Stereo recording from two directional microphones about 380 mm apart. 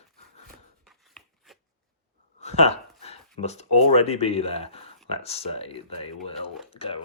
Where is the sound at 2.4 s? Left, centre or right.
Centre.